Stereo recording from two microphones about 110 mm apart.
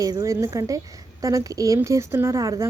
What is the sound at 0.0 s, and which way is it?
A woman's voice, 30° right (ahead or behind).